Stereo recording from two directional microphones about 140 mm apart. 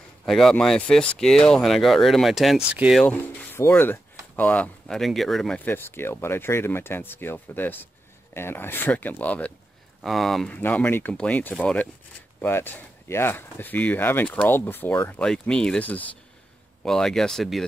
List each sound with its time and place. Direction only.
0.2 s speech: centre (ahead or behind)
3.5 s speech: 15° left (ahead or behind)
5.7 s speech: 15° left (ahead or behind)
10.6 s speech: 15° left (ahead or behind)